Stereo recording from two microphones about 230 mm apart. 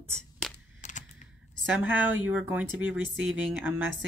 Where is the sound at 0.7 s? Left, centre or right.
Left.